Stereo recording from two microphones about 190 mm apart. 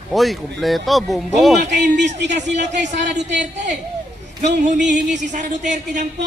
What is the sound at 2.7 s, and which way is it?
Speech, 65° right (ahead or behind).